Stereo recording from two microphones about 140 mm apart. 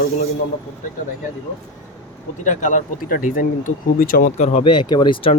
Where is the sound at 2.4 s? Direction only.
65° left (ahead or behind); by 4.3 s 90° left.